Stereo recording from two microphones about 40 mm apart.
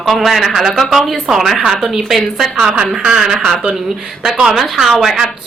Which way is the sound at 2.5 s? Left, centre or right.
Centre.